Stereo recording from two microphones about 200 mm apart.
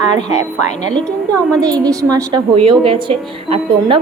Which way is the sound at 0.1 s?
20° right (ahead or behind).